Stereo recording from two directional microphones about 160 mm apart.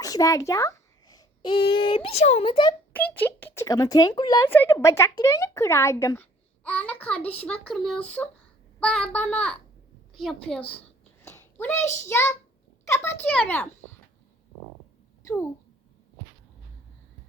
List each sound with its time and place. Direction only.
0.0 s a child's voice: 20° left (ahead or behind)
2.9 s speech: 10° left (ahead or behind); by 4.4 s 25° left (ahead or behind)
4.4 s a child's voice: 15° left (ahead or behind)
11.3 s a sound: 15° left (ahead or behind)
12.0 s a child's voice: 15° left (ahead or behind)